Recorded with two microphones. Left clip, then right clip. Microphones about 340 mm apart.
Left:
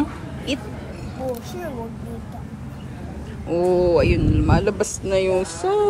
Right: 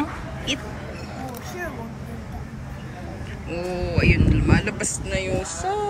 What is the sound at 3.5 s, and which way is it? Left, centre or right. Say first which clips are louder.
Speech: left 11 dB; centre.